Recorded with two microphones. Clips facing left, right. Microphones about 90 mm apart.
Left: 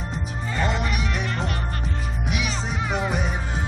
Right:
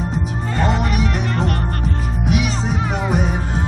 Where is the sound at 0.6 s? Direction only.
45° right (ahead or behind).